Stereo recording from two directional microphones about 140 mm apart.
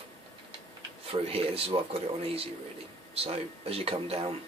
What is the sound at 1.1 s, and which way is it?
Speech, 45° right (ahead or behind).